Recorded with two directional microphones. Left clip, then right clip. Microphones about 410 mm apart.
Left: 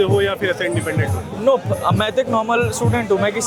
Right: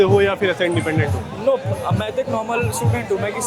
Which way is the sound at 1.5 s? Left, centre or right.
Left.